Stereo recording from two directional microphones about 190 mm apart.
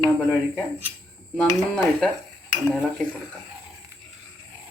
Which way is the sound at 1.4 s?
10° left (ahead or behind).